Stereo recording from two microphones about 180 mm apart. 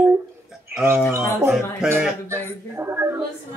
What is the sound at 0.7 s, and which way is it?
Speech, 15° right (ahead or behind).